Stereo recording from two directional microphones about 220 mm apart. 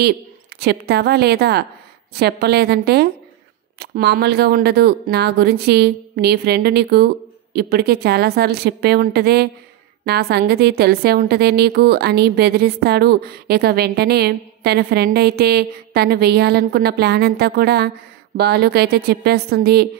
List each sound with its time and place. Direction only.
0.6 s a woman's voice: 45° right (ahead or behind)